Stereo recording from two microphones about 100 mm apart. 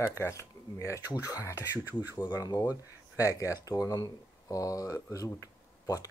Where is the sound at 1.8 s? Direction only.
20° right (ahead or behind).